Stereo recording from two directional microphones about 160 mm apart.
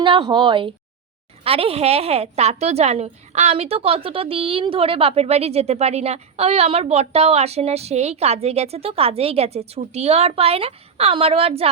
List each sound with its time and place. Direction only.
0.0 s a woman's voice: 30° right (ahead or behind)